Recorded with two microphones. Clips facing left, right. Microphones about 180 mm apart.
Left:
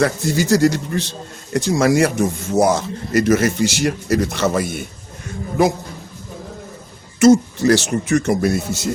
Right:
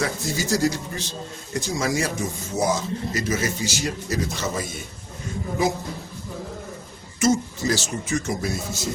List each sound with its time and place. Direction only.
0.0 s speech: 65° left (ahead or behind)
7.2 s speech: 70° left (ahead or behind)